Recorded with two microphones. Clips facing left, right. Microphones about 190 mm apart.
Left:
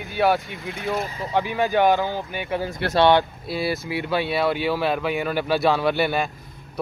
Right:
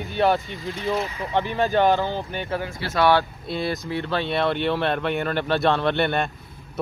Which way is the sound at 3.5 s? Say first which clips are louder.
Even; 5° left (ahead or behind).